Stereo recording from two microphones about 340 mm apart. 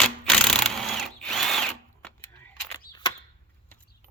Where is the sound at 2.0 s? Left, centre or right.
Centre.